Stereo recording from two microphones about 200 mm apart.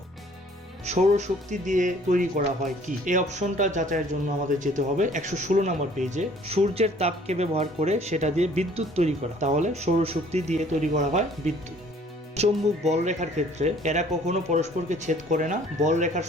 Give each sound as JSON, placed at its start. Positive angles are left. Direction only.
{"t": 0.9, "sound": "speech", "side_deg": -35}